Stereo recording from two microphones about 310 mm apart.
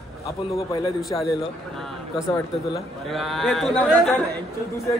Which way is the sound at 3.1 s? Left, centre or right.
Centre.